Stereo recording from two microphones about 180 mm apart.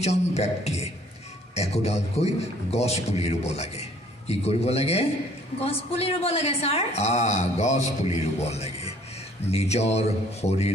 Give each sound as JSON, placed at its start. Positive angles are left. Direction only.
{"t": 0.0, "sound": "a woman's voice", "side_deg": 35}